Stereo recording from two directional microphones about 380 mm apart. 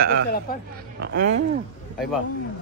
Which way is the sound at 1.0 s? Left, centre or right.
Right.